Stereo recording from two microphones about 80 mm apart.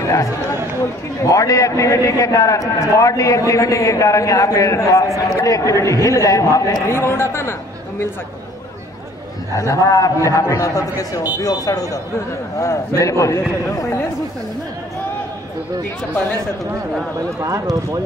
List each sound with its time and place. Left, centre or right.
0.0 s a man's voice: left
6.9 s speech: left
9.6 s a man's voice: left
17.4 s speech: right